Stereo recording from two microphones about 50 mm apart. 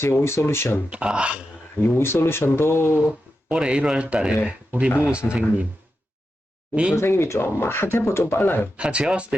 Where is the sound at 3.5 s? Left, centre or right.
Right.